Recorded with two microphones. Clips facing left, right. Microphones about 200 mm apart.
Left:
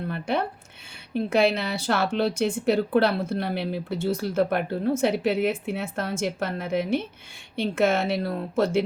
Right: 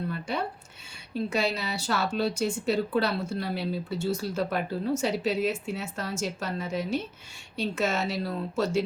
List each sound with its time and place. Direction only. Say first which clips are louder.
0.1 s a woman's voice: left 5 dB; 55° left (ahead or behind)